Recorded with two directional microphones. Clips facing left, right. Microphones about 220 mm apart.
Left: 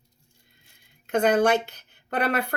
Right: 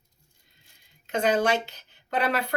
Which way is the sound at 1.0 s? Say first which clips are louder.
Left 3 dB; 55° left (ahead or behind).